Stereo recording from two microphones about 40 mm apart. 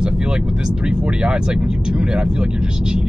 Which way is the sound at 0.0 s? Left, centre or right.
Right.